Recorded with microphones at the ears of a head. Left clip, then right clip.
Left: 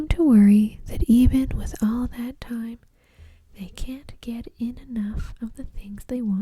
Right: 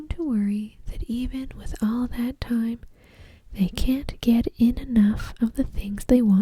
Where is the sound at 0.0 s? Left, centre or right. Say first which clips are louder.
Left 10 dB; left.